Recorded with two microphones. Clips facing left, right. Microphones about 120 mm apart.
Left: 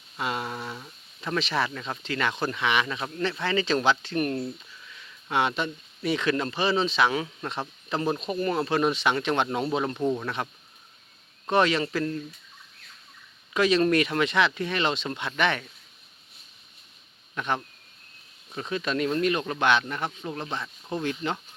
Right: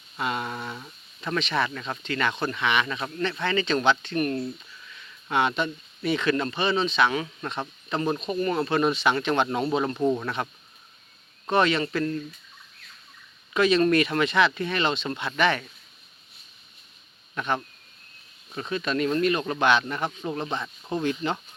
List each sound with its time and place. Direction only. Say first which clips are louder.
0.2 s speech: right 1 dB; 10° left (ahead or behind)
4.1 s speech: right 1 dB; 20° left (ahead or behind)
4.9 s speech: right 2 dB; 5° left (ahead or behind)
8.3 s speech: right 2 dB; 25° left (ahead or behind)
8.6 s speech: right 2 dB; 10° left (ahead or behind)
13.5 s speech: right 1 dB; 5° left (ahead or behind)
17.3 s speech: right 1 dB; centre (ahead or behind)
18.7 s speech: right 1 dB; 10° left (ahead or behind)
19.5 s speech: right 1 dB; 10° right (ahead or behind)